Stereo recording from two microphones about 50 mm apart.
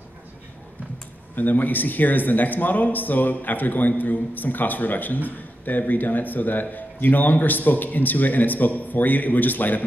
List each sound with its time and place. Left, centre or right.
1.3 s speech: left